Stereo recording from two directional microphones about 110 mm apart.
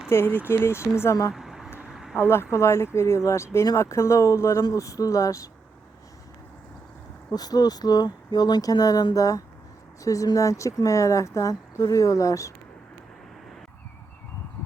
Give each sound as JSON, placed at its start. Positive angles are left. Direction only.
{"t": 0.1, "sound": "speech", "side_deg": 20}
{"t": 1.3, "sound": "a sound", "side_deg": -5}
{"t": 2.1, "sound": "speech", "side_deg": 20}
{"t": 7.3, "sound": "speech", "side_deg": 35}